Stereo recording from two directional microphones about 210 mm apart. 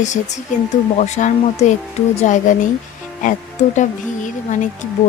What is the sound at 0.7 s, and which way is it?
Speech, 35° left (ahead or behind).